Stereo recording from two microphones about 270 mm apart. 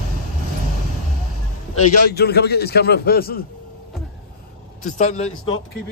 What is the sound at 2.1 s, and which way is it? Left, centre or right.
A man's voice, left.